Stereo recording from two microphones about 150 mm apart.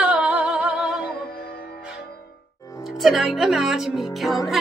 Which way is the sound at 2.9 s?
Centre (ahead or behind).